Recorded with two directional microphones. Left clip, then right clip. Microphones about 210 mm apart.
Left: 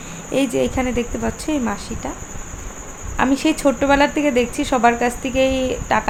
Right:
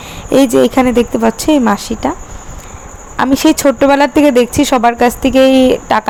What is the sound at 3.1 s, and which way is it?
A woman's voice, 40° right (ahead or behind).